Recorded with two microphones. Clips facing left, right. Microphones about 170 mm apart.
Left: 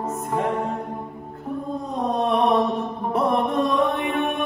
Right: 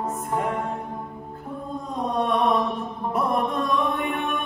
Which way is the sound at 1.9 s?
30° left (ahead or behind).